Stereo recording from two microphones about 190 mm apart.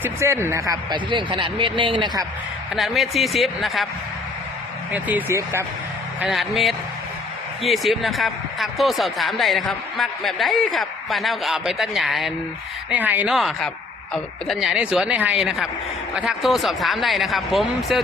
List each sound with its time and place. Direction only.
0.0 s speech: 15° right (ahead or behind)
2.7 s speech: centre (ahead or behind)
4.9 s speech: 10° right (ahead or behind)